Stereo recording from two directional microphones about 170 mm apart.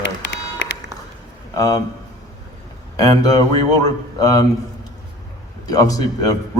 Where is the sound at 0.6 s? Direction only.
90° left.